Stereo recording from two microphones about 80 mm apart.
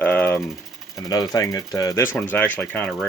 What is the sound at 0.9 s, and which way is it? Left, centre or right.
Speech, left.